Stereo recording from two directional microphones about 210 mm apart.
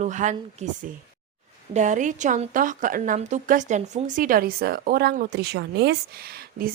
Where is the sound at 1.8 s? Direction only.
35° right (ahead or behind).